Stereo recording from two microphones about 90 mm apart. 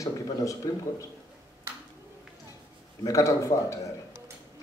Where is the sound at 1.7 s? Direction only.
30° right (ahead or behind).